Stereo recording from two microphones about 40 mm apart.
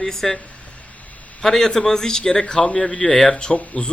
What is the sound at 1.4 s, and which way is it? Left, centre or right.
A man's voice, centre.